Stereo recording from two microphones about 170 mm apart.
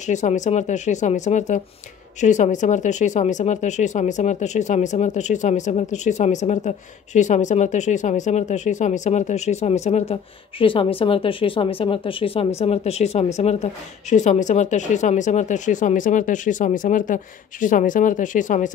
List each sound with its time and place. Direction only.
0.0 s speech: 45° left (ahead or behind)